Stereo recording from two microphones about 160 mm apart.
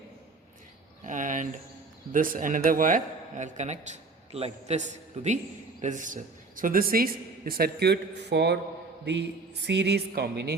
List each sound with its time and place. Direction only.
1.0 s a sound: 55° right (ahead or behind)
2.1 s a man's voice: 60° right (ahead or behind); by 8.5 s 90° right
9.6 s a woman's voice: 90° right